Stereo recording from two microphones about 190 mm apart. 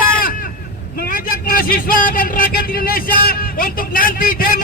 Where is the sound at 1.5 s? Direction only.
50° left (ahead or behind).